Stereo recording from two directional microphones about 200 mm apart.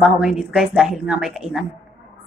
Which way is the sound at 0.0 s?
5° right (ahead or behind).